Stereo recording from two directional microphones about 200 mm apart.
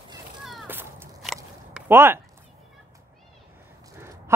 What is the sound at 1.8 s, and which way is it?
Speech, 10° right (ahead or behind).